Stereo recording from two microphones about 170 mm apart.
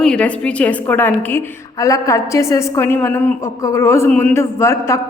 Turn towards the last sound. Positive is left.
turn(degrees=15)  # may be behind; listen again after turning